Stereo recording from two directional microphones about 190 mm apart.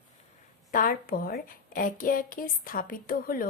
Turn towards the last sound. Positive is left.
turn(degrees=50)  # may be behind; listen again after turning